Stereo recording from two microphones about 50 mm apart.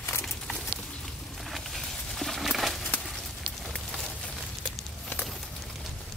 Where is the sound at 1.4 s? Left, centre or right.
Centre.